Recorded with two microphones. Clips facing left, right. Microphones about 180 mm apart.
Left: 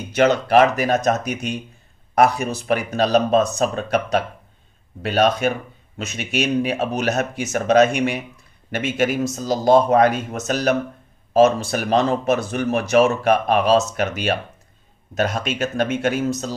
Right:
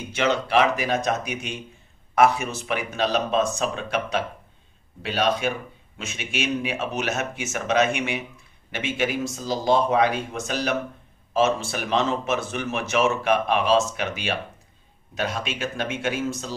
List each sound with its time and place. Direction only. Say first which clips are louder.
0.1 s a man's voice: left 6 dB; 45° left (ahead or behind)